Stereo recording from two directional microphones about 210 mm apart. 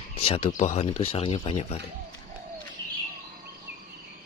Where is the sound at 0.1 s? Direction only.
30° left (ahead or behind).